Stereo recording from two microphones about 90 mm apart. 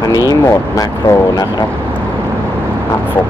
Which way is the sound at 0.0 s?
45° left (ahead or behind).